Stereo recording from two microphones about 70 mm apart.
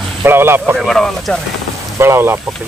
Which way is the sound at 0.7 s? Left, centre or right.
Centre.